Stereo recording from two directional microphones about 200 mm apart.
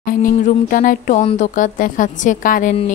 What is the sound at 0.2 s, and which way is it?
A woman's voice, 40° left (ahead or behind).